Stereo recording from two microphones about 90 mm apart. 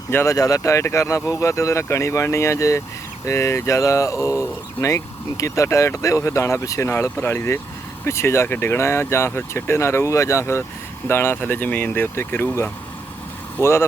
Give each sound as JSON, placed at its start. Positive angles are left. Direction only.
{"t": 0.1, "sound": "speech", "side_deg": 25}
{"t": 0.3, "sound": "speech", "side_deg": 40}